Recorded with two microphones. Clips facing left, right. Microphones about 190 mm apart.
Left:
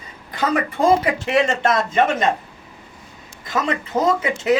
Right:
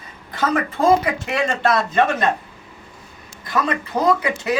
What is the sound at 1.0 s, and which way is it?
Speech, 25° left (ahead or behind).